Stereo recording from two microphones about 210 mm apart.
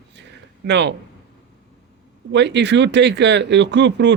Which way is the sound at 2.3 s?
55° right (ahead or behind).